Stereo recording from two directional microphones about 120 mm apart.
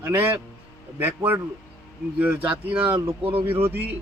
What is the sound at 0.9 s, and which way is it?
Speech, 15° right (ahead or behind).